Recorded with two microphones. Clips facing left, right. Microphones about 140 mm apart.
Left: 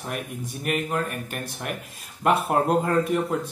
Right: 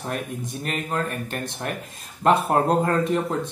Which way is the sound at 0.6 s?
10° left (ahead or behind).